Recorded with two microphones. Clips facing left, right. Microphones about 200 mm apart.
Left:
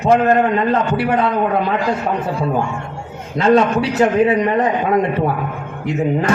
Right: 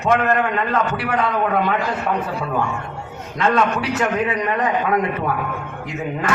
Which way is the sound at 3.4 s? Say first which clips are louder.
Left 6 dB; 30° left (ahead or behind).